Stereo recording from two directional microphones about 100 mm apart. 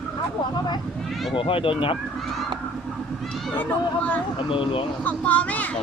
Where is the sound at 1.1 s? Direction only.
Centre (ahead or behind).